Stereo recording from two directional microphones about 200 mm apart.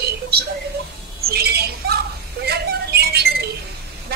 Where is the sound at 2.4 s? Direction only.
55° right (ahead or behind).